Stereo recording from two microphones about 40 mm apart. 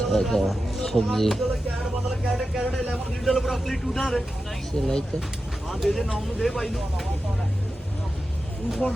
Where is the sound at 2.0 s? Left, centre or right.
Centre.